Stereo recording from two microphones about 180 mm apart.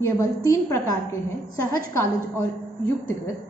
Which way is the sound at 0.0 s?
15° left (ahead or behind).